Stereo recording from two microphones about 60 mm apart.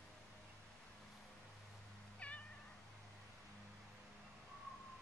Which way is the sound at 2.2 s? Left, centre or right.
Left.